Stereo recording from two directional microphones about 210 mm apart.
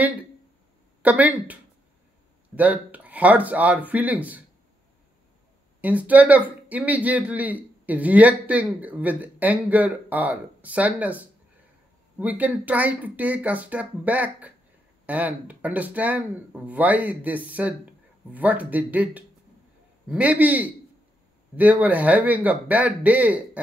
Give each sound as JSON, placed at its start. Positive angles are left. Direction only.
{"t": 1.0, "sound": "speech", "side_deg": -5}
{"t": 5.8, "sound": "speech", "side_deg": -5}